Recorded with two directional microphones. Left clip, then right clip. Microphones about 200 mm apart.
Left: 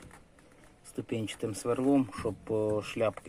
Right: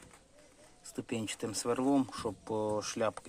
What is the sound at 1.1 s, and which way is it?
Speech, 5° right (ahead or behind).